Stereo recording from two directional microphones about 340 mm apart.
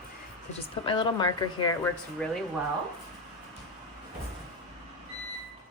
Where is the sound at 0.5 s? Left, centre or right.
Centre.